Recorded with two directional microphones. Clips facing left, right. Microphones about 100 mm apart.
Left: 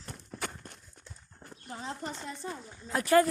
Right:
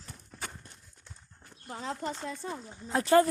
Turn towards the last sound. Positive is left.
turn(degrees=-25)  # may be behind; listen again after turning